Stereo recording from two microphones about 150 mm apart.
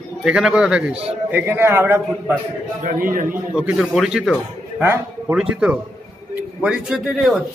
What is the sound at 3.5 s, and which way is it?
Speech, 5° right (ahead or behind).